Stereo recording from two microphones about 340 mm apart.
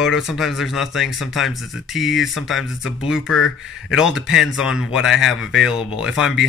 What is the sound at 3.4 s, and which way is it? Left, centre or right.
Speech, left.